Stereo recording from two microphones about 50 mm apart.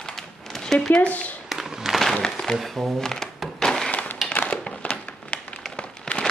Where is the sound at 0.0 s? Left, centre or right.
Centre.